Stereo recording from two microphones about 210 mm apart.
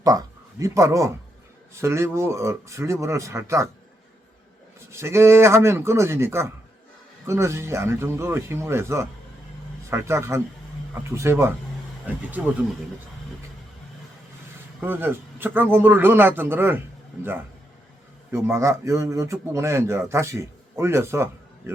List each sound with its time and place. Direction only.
0.0 s speech: 15° right (ahead or behind)
4.9 s speech: 10° right (ahead or behind)
14.8 s speech: 10° right (ahead or behind)
18.3 s speech: 10° right (ahead or behind)